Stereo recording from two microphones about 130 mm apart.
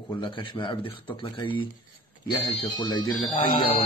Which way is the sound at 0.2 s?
40° left (ahead or behind).